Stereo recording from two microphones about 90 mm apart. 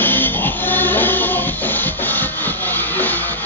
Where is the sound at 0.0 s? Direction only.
20° left (ahead or behind).